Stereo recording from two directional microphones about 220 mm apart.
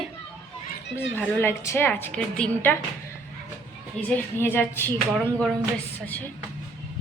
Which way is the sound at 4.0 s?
10° left (ahead or behind).